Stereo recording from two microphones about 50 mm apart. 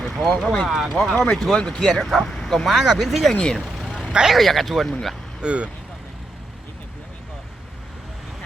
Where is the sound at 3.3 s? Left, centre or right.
Left.